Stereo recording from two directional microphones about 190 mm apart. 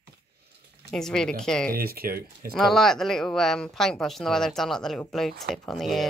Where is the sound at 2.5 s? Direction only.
Centre (ahead or behind).